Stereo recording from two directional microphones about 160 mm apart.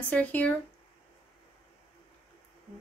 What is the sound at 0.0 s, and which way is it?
Speech, 10° left (ahead or behind).